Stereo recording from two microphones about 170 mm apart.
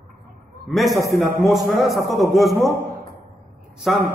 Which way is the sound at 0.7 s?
Centre (ahead or behind).